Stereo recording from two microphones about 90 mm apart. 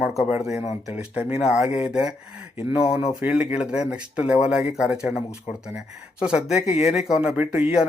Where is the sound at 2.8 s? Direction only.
90° left.